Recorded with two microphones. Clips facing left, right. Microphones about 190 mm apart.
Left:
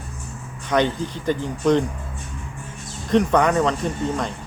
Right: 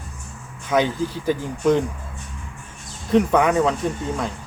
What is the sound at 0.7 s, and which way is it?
Speech, 5° right (ahead or behind).